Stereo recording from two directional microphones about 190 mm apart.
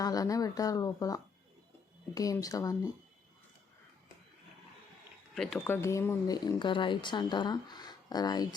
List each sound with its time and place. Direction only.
0.0 s speech: 20° left (ahead or behind)
5.3 s speech: centre (ahead or behind)
5.5 s speech: 10° left (ahead or behind)